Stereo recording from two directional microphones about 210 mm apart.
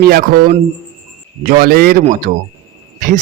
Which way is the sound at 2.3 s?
35° right (ahead or behind).